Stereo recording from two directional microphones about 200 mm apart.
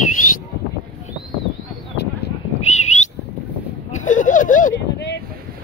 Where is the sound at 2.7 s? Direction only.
35° left (ahead or behind).